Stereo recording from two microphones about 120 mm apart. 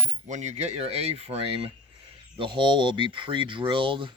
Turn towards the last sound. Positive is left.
turn(degrees=-45)  # may be behind; listen again after turning